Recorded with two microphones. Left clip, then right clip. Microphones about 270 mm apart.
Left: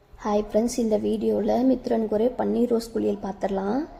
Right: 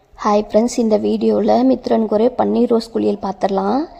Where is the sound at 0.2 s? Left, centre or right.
Right.